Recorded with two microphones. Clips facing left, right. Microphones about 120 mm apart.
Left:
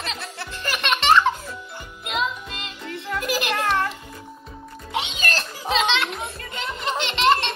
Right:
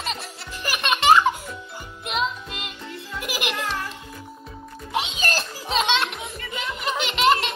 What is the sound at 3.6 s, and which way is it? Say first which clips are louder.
Music: left 7 dB; 65° left (ahead or behind).